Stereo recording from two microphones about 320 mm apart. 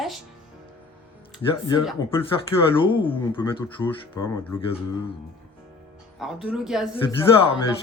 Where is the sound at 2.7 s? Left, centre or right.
Centre.